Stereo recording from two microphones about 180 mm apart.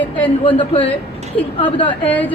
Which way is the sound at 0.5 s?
30° left (ahead or behind).